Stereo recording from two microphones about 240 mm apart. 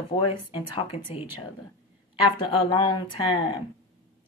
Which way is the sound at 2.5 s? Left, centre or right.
Left.